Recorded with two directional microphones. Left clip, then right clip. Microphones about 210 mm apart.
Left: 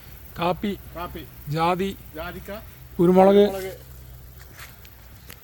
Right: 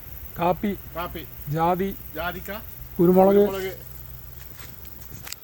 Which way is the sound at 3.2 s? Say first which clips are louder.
Left 2 dB; 15° left (ahead or behind).